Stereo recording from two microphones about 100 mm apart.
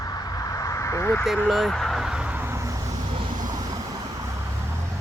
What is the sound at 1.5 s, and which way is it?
Speech, centre (ahead or behind).